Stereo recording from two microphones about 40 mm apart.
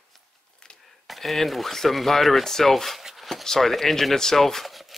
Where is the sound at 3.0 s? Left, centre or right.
Centre.